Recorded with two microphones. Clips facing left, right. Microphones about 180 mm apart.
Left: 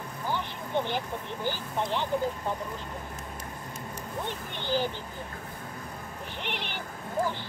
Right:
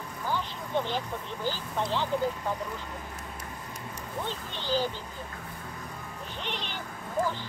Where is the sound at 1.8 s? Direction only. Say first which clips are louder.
Even; 20° left (ahead or behind).